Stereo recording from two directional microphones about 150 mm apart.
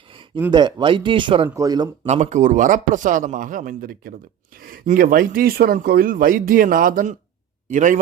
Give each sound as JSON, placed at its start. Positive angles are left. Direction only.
{"t": 0.5, "sound": "speech", "side_deg": -30}
{"t": 1.5, "sound": "speech", "side_deg": -20}
{"t": 2.0, "sound": "a man's voice", "side_deg": -50}